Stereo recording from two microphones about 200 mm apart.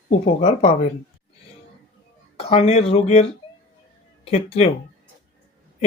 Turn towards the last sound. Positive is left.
turn(degrees=30)  # may be behind; listen again after turning